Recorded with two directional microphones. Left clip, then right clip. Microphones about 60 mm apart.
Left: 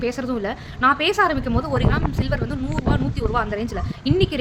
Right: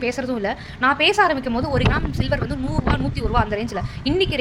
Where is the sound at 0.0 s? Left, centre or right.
Left.